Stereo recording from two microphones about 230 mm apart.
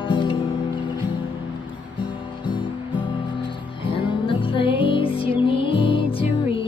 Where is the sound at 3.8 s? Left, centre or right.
Left.